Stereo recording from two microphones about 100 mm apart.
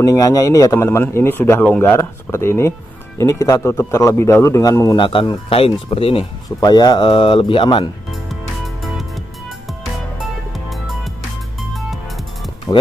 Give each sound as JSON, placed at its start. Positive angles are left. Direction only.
{"t": 0.0, "sound": "a man's voice", "side_deg": 35}
{"t": 0.8, "sound": "a man's voice", "side_deg": 20}
{"t": 4.9, "sound": "a man's voice", "side_deg": 55}
{"t": 5.5, "sound": "speech", "side_deg": 70}
{"t": 6.6, "sound": "a man's voice", "side_deg": 45}
{"t": 7.1, "sound": "speech", "side_deg": 60}
{"t": 8.1, "sound": "music", "side_deg": 0}
{"t": 10.2, "sound": "music", "side_deg": 0}
{"t": 12.7, "sound": "speech", "side_deg": 30}